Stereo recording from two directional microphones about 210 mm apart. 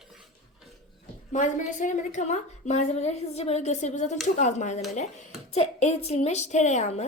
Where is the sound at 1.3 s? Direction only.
35° left (ahead or behind).